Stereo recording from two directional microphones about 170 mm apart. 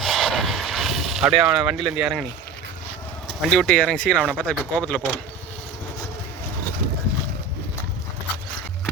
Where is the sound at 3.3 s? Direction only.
5° left (ahead or behind).